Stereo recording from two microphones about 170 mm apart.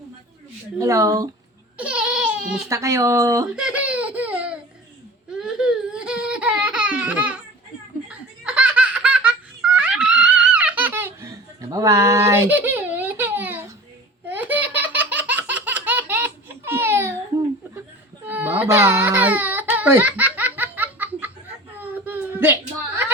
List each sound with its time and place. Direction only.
0.8 s speech: 20° right (ahead or behind)
1.8 s a sound: 5° right (ahead or behind)
2.6 s speech: 20° right (ahead or behind)
3.5 s baby laughter: 5° right (ahead or behind)
8.0 s laughter: 5° right (ahead or behind)
14.3 s baby laughter: 10° right (ahead or behind)
18.3 s baby cry: 10° right (ahead or behind)
21.8 s a sound: 10° right (ahead or behind)